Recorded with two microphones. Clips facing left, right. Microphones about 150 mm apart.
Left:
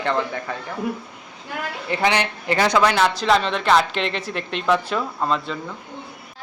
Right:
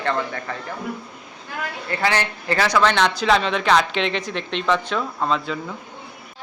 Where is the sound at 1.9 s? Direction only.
15° left (ahead or behind).